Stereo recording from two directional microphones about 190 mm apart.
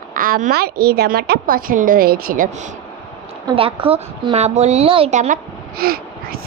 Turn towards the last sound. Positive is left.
turn(degrees=-50)  # may be behind; listen again after turning